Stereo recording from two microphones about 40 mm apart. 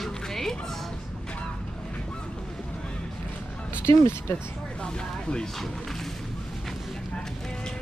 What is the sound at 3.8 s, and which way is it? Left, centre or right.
Speech, left.